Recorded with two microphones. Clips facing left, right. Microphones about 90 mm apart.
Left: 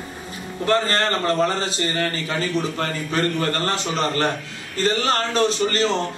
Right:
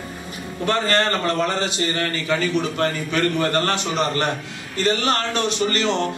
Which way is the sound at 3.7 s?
35° left (ahead or behind).